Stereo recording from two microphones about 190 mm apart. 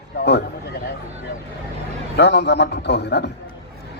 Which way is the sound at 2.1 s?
65° left (ahead or behind).